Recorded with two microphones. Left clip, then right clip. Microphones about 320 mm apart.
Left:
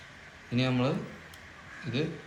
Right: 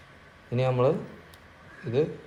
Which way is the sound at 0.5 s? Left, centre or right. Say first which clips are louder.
Right 5 dB; centre.